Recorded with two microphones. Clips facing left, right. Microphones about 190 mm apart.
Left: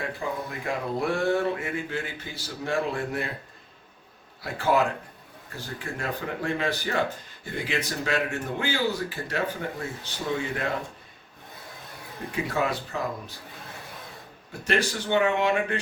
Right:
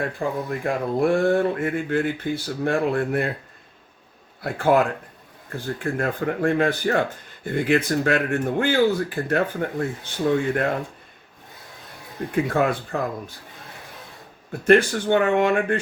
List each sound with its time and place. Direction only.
0.2 s speech: 55° right (ahead or behind)
4.4 s speech: 55° right (ahead or behind)
5.8 s speech: 55° right (ahead or behind)
12.3 s speech: 55° right (ahead or behind)
14.6 s speech: 55° right (ahead or behind)